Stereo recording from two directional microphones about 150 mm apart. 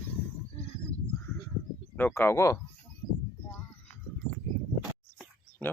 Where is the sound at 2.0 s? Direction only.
15° left (ahead or behind).